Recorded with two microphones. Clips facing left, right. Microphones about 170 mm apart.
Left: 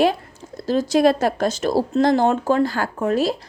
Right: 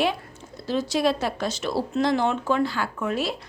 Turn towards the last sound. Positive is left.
turn(degrees=40)  # may be behind; listen again after turning